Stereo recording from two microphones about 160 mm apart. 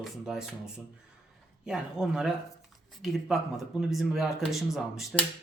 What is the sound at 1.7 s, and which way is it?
Speech, 5° right (ahead or behind).